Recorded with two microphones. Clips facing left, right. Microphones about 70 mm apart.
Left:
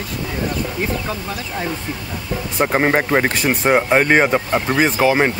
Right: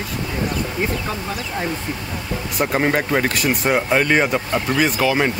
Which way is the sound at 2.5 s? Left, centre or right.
Left.